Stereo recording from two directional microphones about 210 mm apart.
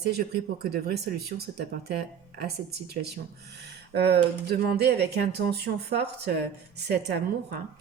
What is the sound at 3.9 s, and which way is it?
Speech, 50° right (ahead or behind).